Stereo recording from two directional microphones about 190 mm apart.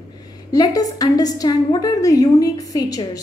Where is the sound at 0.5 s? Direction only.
20° left (ahead or behind).